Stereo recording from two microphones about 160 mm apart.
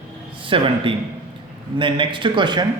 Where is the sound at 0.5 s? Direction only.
30° right (ahead or behind).